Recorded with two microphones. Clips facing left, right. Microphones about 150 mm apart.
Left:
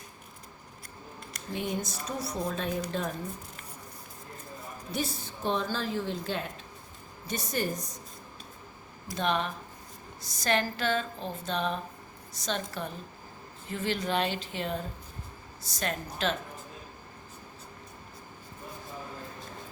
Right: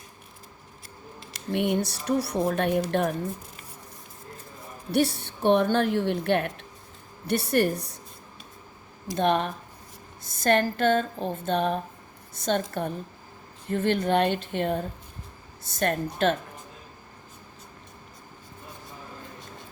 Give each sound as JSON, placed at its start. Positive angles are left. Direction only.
{"t": 1.2, "sound": "a woman's voice", "side_deg": -80}
{"t": 4.9, "sound": "a woman's voice", "side_deg": -65}
{"t": 9.1, "sound": "a woman's voice", "side_deg": -50}